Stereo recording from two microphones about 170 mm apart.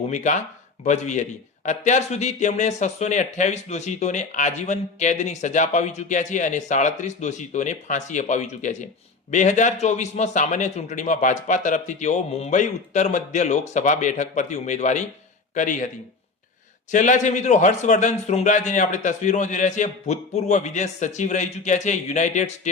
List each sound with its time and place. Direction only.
0.1 s a man's voice: 45° left (ahead or behind)
16.9 s a man's voice: 45° left (ahead or behind)